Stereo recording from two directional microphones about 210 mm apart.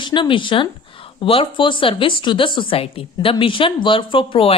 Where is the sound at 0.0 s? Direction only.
20° left (ahead or behind).